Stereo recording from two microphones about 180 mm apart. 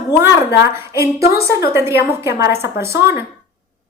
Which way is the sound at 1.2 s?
60° left (ahead or behind).